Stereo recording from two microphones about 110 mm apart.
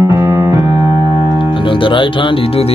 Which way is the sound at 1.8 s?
50° left (ahead or behind).